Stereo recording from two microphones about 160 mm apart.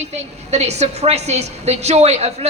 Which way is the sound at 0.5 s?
45° right (ahead or behind).